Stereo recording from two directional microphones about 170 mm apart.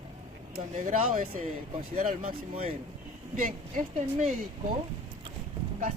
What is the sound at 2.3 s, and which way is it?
Speech, 35° right (ahead or behind).